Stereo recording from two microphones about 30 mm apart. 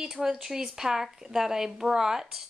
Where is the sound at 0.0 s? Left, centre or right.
Centre.